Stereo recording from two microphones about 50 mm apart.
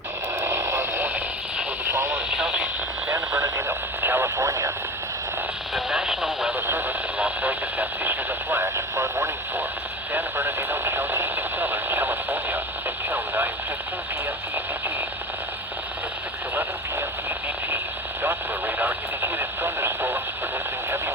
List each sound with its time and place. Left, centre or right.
0.3 s radio: right
1.8 s vehicle: right
2.3 s radio: centre
3.1 s radio: right
4.0 s radio: right
4.4 s radio: right
5.7 s radio: centre
6.7 s radio: right
7.2 s radio: right
10.1 s radio: right
18.2 s radio: right